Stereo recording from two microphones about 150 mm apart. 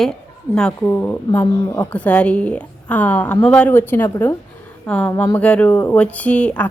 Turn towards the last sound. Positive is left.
turn(degrees=10)  # may be behind; listen again after turning